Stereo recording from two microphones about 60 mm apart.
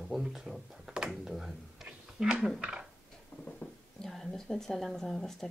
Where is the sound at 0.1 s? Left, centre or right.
Centre.